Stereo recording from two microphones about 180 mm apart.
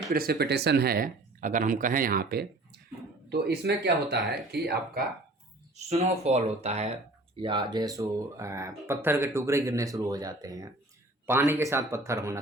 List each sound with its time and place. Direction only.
0.1 s speech: 55° right (ahead or behind)
5.7 s speech: 35° right (ahead or behind); by 12.4 s 15° right (ahead or behind)